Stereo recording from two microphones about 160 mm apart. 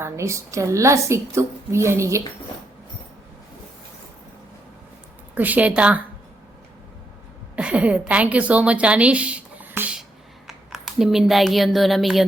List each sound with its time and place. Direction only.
0.0 s a woman's voice: 20° right (ahead or behind)
5.3 s a woman's voice: 10° right (ahead or behind)
7.5 s a woman's voice: 10° right (ahead or behind)